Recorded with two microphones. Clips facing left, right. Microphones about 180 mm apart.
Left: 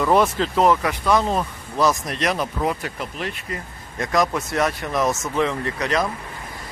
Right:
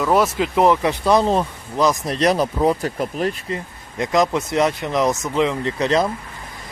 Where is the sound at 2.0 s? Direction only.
35° right (ahead or behind).